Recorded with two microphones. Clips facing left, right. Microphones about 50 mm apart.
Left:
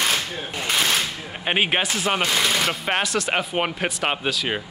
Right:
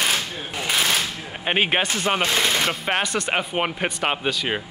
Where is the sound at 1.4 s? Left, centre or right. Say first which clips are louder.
Right 1 dB; centre.